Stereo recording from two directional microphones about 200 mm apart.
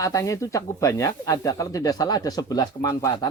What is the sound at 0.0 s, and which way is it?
Speech, 15° left (ahead or behind).